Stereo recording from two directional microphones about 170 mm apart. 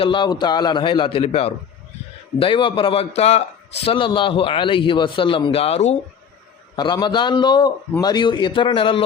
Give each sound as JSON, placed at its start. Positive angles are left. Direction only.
{"t": 0.0, "sound": "a man's voice", "side_deg": 25}
{"t": 6.7, "sound": "a man's voice", "side_deg": 25}